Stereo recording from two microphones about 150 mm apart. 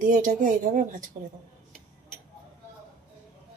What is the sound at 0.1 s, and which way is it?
Speech, 55° right (ahead or behind).